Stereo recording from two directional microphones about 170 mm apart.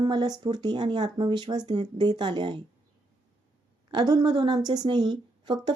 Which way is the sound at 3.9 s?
25° right (ahead or behind).